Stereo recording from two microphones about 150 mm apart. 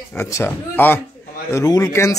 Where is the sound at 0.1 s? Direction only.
15° left (ahead or behind).